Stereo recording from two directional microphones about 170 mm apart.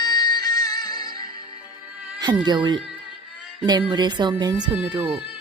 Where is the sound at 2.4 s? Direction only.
25° right (ahead or behind).